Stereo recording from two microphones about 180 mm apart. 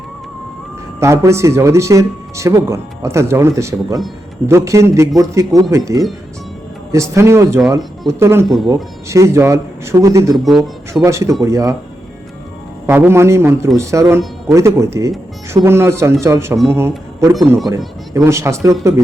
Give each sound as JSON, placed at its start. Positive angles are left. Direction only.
{"t": 0.9, "sound": "speech", "side_deg": -15}
{"t": 10.3, "sound": "speech", "side_deg": 0}
{"t": 11.0, "sound": "speech", "side_deg": -15}
{"t": 12.9, "sound": "speech", "side_deg": -10}